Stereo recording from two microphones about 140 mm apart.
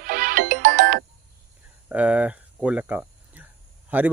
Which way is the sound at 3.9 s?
10° right (ahead or behind).